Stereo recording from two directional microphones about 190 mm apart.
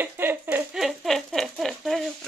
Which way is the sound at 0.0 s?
10° right (ahead or behind).